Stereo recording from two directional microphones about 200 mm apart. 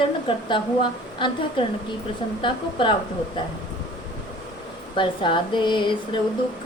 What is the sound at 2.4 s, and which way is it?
Speech, 25° left (ahead or behind).